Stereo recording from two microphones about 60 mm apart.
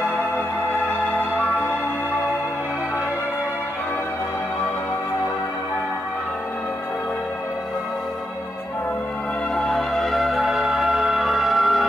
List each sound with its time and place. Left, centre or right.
0.8 s music: left
9.6 s music: centre